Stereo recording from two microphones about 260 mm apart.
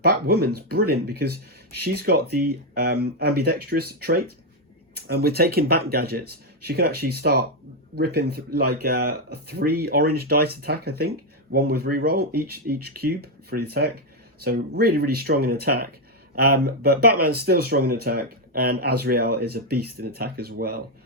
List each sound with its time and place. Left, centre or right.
0.0 s speech: right